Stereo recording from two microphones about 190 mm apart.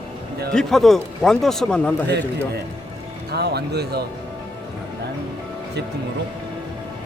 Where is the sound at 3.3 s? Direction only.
60° right (ahead or behind).